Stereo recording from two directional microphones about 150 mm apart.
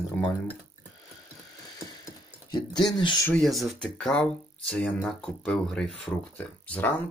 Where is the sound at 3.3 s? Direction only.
Centre (ahead or behind).